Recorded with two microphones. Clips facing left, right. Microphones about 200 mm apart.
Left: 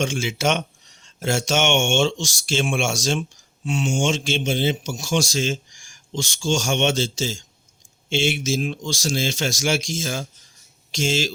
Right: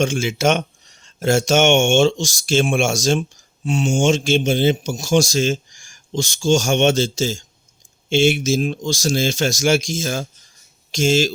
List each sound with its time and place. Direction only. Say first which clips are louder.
0.0 s speech: right 4 dB; 45° right (ahead or behind)